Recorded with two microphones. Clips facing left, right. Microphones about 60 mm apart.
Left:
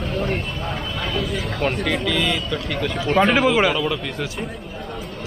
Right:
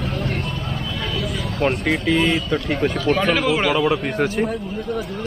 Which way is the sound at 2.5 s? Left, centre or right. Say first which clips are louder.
Right 4 dB; right.